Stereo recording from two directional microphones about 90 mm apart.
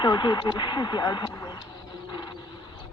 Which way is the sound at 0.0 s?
55° left (ahead or behind).